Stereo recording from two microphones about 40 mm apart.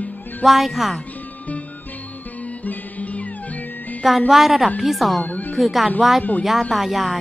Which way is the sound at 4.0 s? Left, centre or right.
Centre.